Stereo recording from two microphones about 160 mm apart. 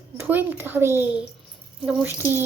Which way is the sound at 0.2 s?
10° right (ahead or behind).